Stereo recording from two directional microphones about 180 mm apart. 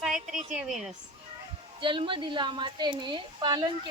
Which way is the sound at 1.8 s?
25° right (ahead or behind).